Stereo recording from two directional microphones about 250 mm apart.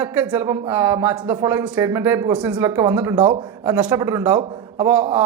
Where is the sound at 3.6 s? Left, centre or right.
Centre.